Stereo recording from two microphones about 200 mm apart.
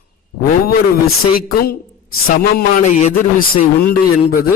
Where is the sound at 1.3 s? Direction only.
50° left (ahead or behind).